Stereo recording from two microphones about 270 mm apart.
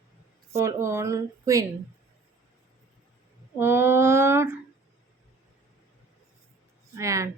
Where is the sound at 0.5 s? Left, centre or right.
Centre.